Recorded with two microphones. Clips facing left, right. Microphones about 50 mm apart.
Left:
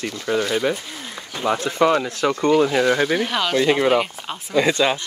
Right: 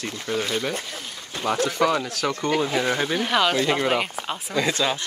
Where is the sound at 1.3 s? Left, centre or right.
Left.